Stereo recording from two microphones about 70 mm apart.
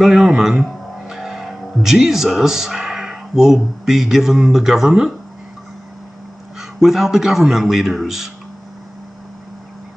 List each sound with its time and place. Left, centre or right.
0.0 s speech: centre
6.6 s a man's voice: centre